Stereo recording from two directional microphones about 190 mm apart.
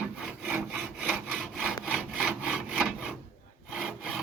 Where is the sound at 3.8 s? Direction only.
5° right (ahead or behind).